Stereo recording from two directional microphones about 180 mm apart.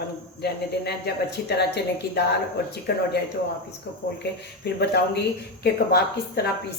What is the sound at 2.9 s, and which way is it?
Speech, 60° left (ahead or behind).